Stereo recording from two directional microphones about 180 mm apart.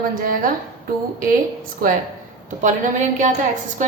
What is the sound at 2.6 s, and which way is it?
A woman's voice, 45° right (ahead or behind).